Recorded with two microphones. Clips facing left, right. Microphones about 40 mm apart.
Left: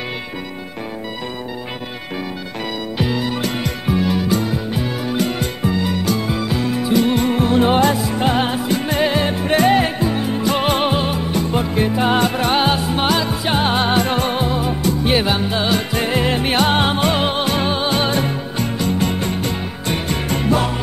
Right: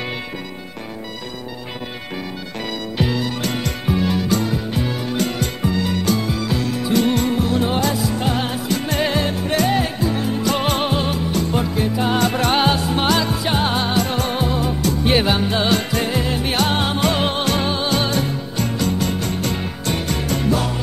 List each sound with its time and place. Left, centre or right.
3.0 s music: centre
7.3 s music: left; by 9.3 s centre
9.3 s music: left
10.1 s music: centre
11.7 s music: left
12.3 s music: centre; by 14.3 s left
14.3 s music: centre
15.0 s music: centre
16.1 s music: left
19.4 s music: centre
20.1 s music: left